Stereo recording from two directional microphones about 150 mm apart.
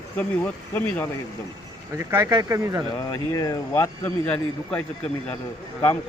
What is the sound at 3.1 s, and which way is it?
Speech, 25° left (ahead or behind).